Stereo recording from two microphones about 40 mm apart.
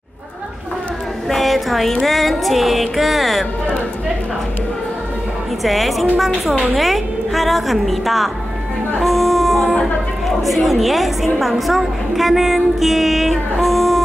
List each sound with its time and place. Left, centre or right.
1.3 s a sound: centre
2.0 s music: centre
5.6 s music: centre
9.0 s a sound: centre
10.2 s a woman's voice: centre
11.3 s music: centre